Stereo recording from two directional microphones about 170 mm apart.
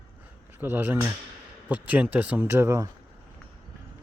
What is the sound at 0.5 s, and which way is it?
Speech, 10° right (ahead or behind).